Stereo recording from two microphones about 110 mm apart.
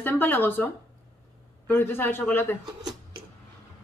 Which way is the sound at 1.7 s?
20° left (ahead or behind).